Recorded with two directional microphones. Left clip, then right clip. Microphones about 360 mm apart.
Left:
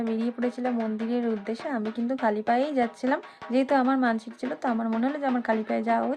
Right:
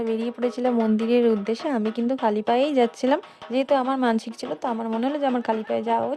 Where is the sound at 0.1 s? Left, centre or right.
Right.